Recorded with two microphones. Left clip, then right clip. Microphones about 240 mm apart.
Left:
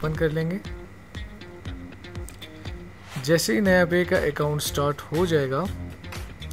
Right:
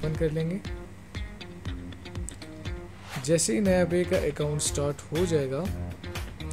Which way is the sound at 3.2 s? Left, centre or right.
Centre.